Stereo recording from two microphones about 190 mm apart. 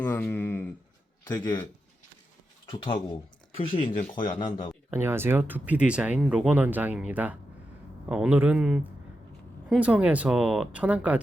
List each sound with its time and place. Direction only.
0.0 s speech: 10° left (ahead or behind)
1.3 s speech: 20° left (ahead or behind)
2.6 s speech: 25° left (ahead or behind)
4.9 s speech: 10° right (ahead or behind)